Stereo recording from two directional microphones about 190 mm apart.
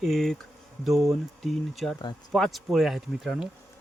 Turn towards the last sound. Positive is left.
turn(degrees=0)  # may be behind; listen again after turning